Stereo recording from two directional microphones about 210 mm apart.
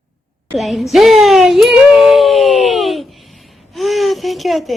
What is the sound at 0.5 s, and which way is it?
A child's voice, centre (ahead or behind).